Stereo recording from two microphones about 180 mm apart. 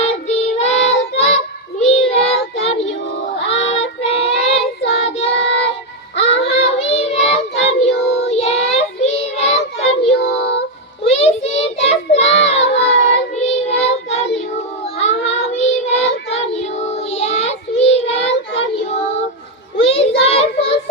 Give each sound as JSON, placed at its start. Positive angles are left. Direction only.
{"t": 0.0, "sound": "child singing", "side_deg": 35}